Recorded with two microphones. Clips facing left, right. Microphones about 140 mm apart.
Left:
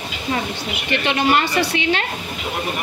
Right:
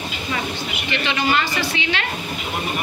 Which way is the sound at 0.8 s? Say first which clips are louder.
Left 3 dB; 55° left (ahead or behind).